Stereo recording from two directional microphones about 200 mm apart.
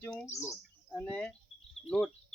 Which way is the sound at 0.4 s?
10° left (ahead or behind).